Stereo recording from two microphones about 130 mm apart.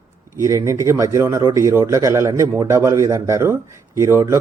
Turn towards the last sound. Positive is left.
turn(degrees=-20)  # may be behind; listen again after turning